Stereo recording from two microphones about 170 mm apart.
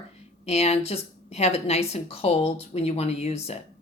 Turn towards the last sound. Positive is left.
turn(degrees=40)  # may be behind; listen again after turning